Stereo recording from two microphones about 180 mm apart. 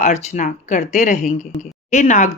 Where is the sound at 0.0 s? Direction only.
40° left (ahead or behind).